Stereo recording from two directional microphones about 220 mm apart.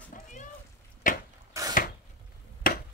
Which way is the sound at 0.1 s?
35° left (ahead or behind).